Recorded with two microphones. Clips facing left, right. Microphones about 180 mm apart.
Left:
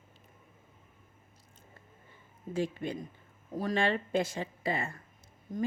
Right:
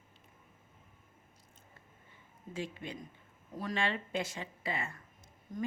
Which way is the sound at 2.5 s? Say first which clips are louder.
Left 8 dB; 40° left (ahead or behind).